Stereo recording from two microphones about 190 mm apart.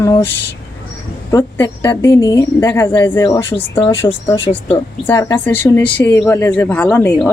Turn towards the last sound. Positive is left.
turn(degrees=5)  # may be behind; listen again after turning